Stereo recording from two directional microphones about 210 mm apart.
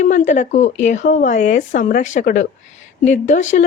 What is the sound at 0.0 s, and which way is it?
Speech, 35° left (ahead or behind).